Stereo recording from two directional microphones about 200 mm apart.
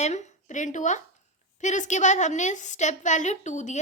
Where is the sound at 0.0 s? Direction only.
35° left (ahead or behind).